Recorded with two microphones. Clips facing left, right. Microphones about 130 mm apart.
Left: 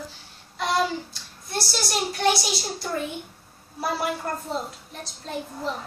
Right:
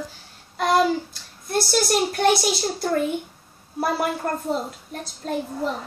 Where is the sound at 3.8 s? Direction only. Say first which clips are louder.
Right 3 dB; 45° right (ahead or behind).